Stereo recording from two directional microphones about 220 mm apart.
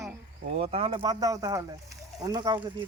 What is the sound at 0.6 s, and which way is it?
Speech, 25° right (ahead or behind).